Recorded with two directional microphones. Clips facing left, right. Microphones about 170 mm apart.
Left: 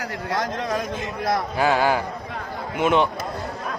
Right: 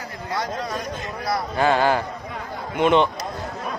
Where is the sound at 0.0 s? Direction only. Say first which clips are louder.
Left 3 dB; 75° left (ahead or behind).